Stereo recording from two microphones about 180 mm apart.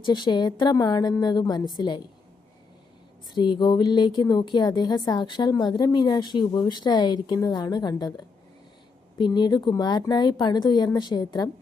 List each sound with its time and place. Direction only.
0.0 s a woman's voice: 25° left (ahead or behind)
3.3 s a woman's voice: 25° left (ahead or behind)